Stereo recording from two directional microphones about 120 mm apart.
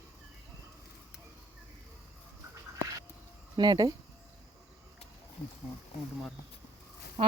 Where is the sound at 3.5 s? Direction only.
35° right (ahead or behind).